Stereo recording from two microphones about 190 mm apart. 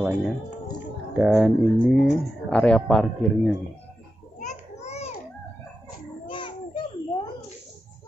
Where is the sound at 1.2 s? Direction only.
5° right (ahead or behind).